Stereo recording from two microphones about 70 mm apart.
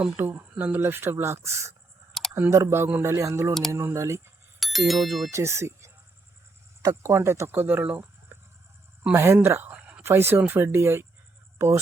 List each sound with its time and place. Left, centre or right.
0.2 s speech: right
4.6 s speech: centre
5.3 s speech: right
7.1 s speech: right
9.1 s speech: right
9.7 s a sound: centre
10.0 s speech: right